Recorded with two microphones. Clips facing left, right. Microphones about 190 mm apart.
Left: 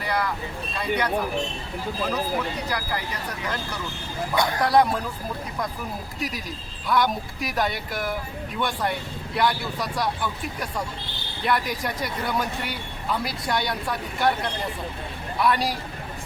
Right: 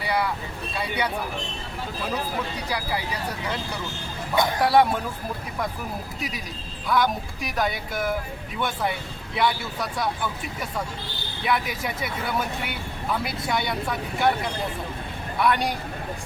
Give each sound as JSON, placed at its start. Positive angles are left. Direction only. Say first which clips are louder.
{"t": 0.0, "sound": "vehicle", "louder": "right 1 dB", "side_deg": -10}
{"t": 0.8, "sound": "speech", "louder": "left 2 dB", "side_deg": -10}
{"t": 2.6, "sound": "speech", "louder": "right 1 dB", "side_deg": -10}
{"t": 4.6, "sound": "speech", "louder": "right 1 dB", "side_deg": -5}
{"t": 6.1, "sound": "speech", "louder": "left 2 dB", "side_deg": 0}